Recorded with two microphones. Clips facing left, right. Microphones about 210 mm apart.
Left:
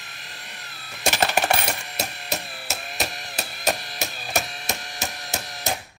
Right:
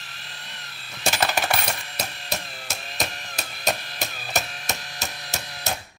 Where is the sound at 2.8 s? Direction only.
10° left (ahead or behind).